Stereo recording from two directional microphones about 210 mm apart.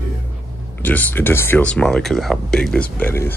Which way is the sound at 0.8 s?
10° left (ahead or behind).